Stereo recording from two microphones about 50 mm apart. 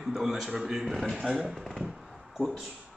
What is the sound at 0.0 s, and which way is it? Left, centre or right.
A man's voice, centre.